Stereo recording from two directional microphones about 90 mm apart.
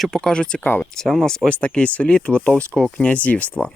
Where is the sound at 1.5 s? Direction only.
15° left (ahead or behind).